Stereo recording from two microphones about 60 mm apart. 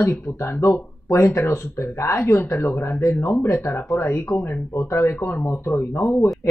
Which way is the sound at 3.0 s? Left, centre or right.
Left.